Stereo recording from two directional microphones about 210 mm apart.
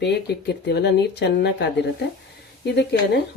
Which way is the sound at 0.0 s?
55° left (ahead or behind).